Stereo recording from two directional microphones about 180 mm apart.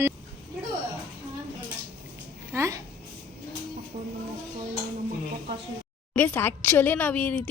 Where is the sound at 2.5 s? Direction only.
15° right (ahead or behind).